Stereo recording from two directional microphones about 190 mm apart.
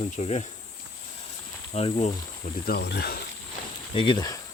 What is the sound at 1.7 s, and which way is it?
Speech, 35° left (ahead or behind).